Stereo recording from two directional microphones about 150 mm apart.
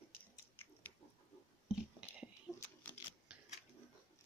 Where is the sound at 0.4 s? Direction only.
15° left (ahead or behind).